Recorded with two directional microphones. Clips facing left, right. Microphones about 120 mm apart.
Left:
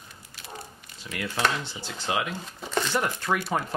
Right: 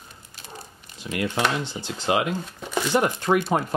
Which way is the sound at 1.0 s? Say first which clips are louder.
Right 7 dB; 20° right (ahead or behind).